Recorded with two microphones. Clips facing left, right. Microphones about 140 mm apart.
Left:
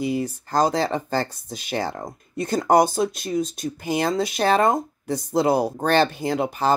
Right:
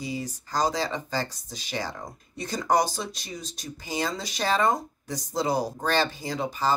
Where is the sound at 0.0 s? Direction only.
60° left (ahead or behind).